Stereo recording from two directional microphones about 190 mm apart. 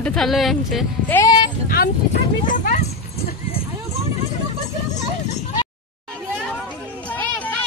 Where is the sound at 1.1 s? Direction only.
20° left (ahead or behind).